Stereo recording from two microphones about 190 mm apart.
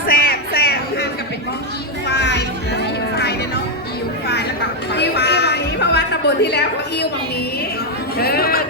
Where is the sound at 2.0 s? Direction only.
65° left (ahead or behind).